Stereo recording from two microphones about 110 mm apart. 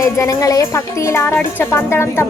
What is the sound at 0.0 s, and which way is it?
A woman's voice, 30° left (ahead or behind).